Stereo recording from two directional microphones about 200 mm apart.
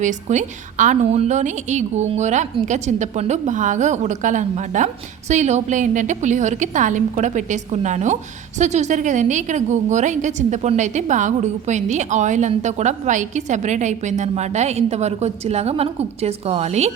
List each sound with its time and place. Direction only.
0.0 s a woman's voice: 40° right (ahead or behind)